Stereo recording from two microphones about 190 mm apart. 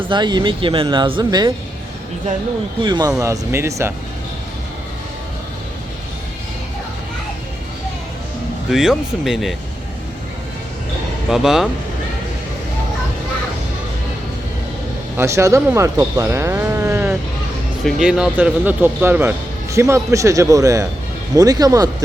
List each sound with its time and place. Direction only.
0.0 s speech: 25° right (ahead or behind)
2.8 s speech: 20° right (ahead or behind)
8.7 s speech: centre (ahead or behind)
11.3 s speech: centre (ahead or behind)
15.1 s speech: 15° right (ahead or behind)